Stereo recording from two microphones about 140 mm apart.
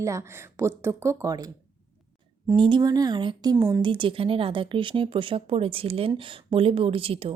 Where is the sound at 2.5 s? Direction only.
35° right (ahead or behind).